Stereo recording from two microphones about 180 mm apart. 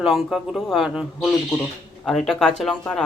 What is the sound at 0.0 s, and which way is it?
Speech, centre (ahead or behind).